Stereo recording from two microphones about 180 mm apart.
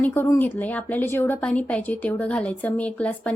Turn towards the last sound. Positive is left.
turn(degrees=10)  # may be behind; listen again after turning